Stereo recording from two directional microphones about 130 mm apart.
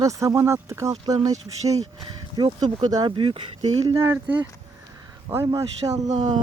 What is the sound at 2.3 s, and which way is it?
Speech, 35° right (ahead or behind).